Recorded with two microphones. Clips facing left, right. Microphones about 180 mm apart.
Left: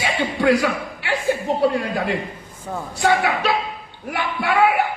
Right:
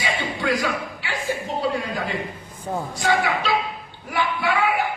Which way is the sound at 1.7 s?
65° left (ahead or behind).